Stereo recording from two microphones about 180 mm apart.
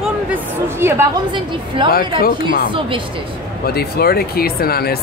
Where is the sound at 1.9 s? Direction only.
55° left (ahead or behind).